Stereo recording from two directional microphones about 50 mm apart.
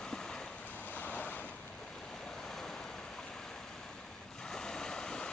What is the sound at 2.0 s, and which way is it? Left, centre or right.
Waves, centre.